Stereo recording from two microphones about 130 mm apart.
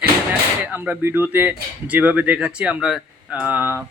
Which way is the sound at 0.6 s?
15° right (ahead or behind).